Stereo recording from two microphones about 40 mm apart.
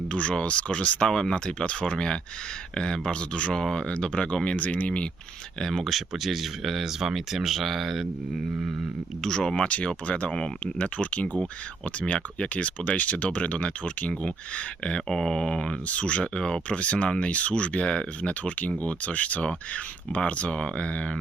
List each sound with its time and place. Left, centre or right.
0.1 s speech: left
1.1 s speech: centre
1.5 s speech: left
4.6 s speech: left
5.5 s speech: centre
9.2 s speech: centre
9.6 s speech: left
10.2 s speech: left
10.8 s speech: left; by 15.7 s centre
15.9 s speech: left
16.6 s speech: left